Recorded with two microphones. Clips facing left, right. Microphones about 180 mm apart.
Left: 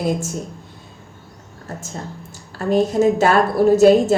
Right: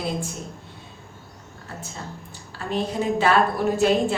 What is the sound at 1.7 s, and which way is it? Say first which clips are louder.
A woman's voice: left 5 dB; 45° left (ahead or behind).